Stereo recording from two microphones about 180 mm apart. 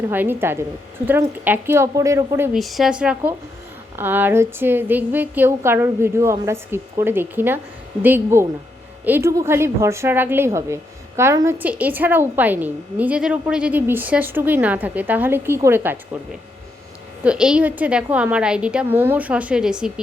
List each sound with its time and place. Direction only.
0.1 s a woman's voice: 10° right (ahead or behind)
2.6 s a woman's voice: centre (ahead or behind)
17.2 s a woman's voice: 5° right (ahead or behind)